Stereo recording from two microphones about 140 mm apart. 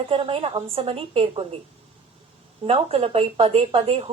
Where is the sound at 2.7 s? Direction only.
45° right (ahead or behind).